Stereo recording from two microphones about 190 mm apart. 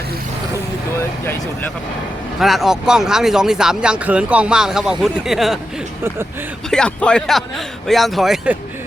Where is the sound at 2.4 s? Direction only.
Centre (ahead or behind).